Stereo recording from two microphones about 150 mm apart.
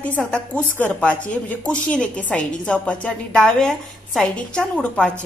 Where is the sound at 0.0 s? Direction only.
10° left (ahead or behind).